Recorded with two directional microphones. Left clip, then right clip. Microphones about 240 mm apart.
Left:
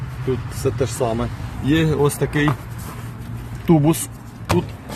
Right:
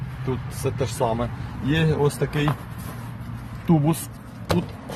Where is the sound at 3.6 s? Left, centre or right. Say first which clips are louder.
Left 6 dB; left.